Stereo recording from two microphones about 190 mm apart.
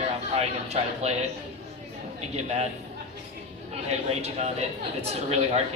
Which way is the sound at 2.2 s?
35° right (ahead or behind).